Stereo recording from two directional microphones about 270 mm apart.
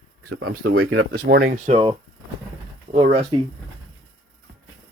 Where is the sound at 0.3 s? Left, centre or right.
Right.